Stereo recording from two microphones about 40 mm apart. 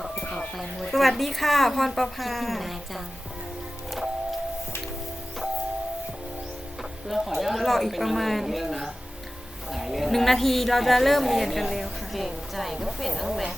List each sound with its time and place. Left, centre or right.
0.5 s a woman's voice: centre
7.1 s a woman's voice: centre
9.6 s a woman's voice: centre